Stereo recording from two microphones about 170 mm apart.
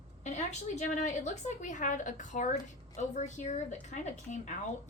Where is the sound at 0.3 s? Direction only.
45° left (ahead or behind).